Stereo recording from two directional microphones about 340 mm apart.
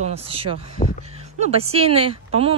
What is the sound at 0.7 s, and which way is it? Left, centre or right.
Speech, left.